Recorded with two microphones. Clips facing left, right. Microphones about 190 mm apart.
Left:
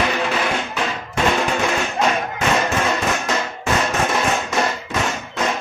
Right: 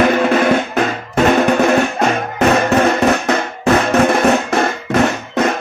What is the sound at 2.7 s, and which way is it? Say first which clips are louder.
Music: right 8 dB; 65° right (ahead or behind).